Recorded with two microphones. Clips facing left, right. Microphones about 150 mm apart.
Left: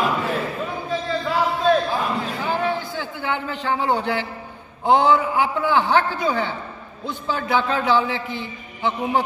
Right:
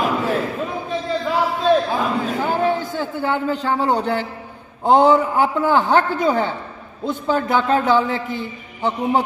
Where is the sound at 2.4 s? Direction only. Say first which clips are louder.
Right 4 dB; 45° right (ahead or behind).